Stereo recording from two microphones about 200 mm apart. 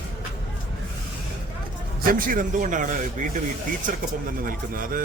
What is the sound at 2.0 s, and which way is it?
A man's voice, 45° right (ahead or behind).